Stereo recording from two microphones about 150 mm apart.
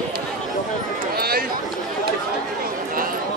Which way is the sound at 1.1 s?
90° right.